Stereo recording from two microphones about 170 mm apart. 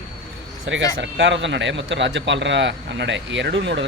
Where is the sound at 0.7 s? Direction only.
90° right.